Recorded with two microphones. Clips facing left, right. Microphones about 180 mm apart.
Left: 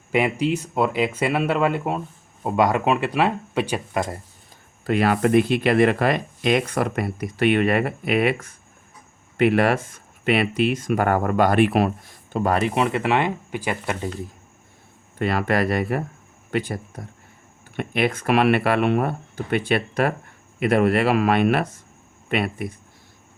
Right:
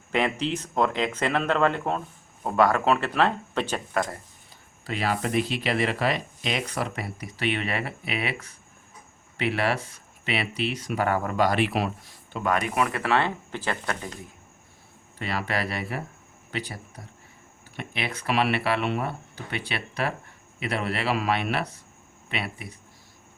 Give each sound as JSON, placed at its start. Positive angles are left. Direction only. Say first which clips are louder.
{"t": 0.1, "sound": "speech", "louder": "left 5 dB", "side_deg": 10}
{"t": 4.9, "sound": "speech", "louder": "left 9 dB", "side_deg": 55}
{"t": 12.5, "sound": "speech", "louder": "left 5 dB", "side_deg": 25}
{"t": 15.2, "sound": "speech", "louder": "left 8 dB", "side_deg": 50}